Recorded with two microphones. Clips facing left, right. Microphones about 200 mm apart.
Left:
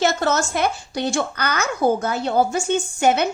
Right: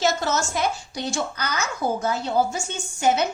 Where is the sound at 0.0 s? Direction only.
60° left (ahead or behind).